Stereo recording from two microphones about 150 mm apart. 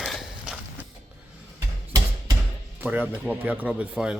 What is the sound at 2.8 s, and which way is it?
Speech, 10° right (ahead or behind).